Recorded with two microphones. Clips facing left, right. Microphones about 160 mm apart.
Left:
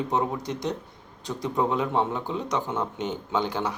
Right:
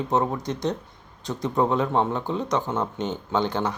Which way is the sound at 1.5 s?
40° right (ahead or behind).